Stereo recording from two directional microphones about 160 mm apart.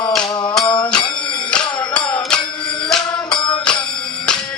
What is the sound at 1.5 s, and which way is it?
Music, 5° left (ahead or behind).